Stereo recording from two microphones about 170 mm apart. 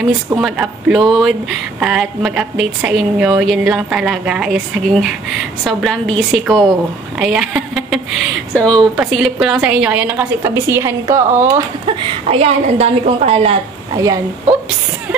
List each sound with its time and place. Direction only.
0.4 s speech: 5° right (ahead or behind)
8.9 s a woman's voice: 5° right (ahead or behind)
11.8 s a woman's voice: 35° right (ahead or behind)
13.9 s speech: 20° right (ahead or behind)